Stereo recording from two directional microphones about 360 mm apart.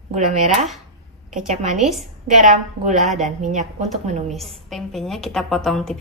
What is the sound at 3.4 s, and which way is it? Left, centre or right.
Speech, centre.